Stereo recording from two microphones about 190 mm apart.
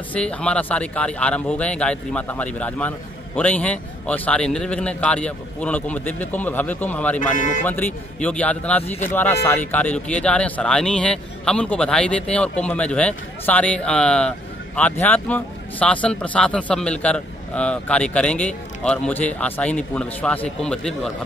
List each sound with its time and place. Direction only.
0.1 s speech: 5° left (ahead or behind)
7.2 s speech: 40° left (ahead or behind)
7.6 s speech: 10° left (ahead or behind)